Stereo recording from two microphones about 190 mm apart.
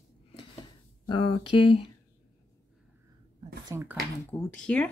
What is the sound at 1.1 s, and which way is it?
Speech, 25° left (ahead or behind).